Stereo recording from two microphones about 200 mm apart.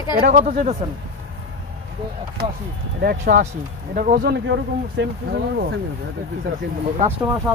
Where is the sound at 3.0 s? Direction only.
50° right (ahead or behind).